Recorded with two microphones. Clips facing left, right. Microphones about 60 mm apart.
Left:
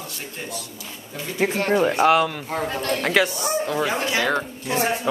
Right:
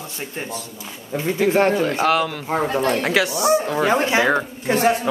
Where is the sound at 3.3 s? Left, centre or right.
Right.